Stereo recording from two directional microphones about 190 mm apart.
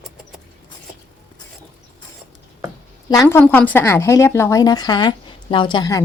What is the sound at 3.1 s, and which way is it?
A woman's voice, 15° left (ahead or behind).